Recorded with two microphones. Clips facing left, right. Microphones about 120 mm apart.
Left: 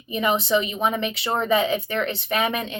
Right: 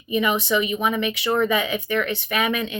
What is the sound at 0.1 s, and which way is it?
Speech, 35° left (ahead or behind).